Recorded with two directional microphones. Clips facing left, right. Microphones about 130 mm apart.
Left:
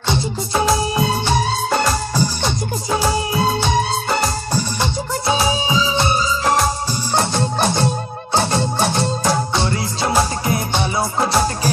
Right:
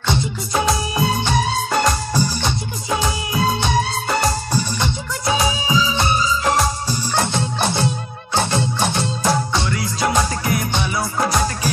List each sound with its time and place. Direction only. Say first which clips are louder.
0.5 s music: left 2 dB; 30° left (ahead or behind)
5.2 s music: left 1 dB; 30° left (ahead or behind)
10.0 s music: left 1 dB; 30° left (ahead or behind)